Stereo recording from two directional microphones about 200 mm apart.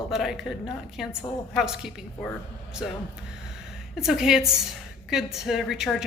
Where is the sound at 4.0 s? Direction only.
5° right (ahead or behind).